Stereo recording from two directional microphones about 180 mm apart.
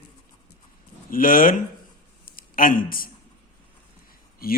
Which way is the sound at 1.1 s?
50° left (ahead or behind).